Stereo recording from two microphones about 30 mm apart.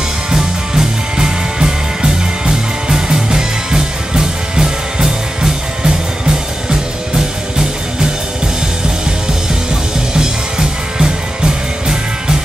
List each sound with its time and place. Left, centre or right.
0.3 s music: right
10.1 s music: right